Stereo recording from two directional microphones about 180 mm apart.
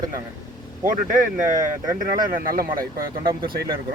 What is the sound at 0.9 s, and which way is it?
Speech, 45° right (ahead or behind).